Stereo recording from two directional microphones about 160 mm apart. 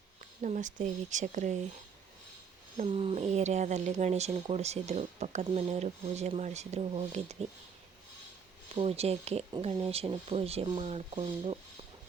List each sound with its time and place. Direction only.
0.4 s speech: 50° right (ahead or behind)
2.7 s speech: 40° right (ahead or behind)
8.7 s speech: 40° right (ahead or behind)